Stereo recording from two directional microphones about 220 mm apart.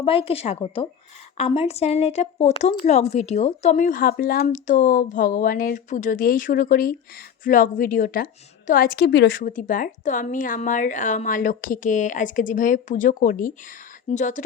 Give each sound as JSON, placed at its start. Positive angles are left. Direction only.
{"t": 0.0, "sound": "a woman's voice", "side_deg": 25}
{"t": 9.4, "sound": "a woman's voice", "side_deg": 35}